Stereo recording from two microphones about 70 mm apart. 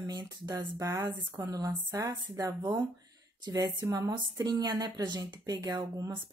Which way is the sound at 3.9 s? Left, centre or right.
Right.